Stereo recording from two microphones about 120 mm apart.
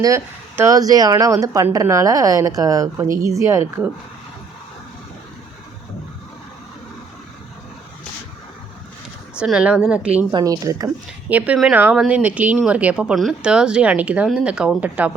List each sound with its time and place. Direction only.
0.0 s speech: 25° right (ahead or behind)
9.4 s speech: 5° right (ahead or behind)
10.3 s speech: 30° right (ahead or behind)
11.3 s speech: 10° right (ahead or behind)